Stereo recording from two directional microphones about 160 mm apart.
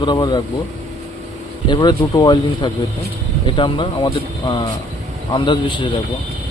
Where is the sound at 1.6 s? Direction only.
25° left (ahead or behind).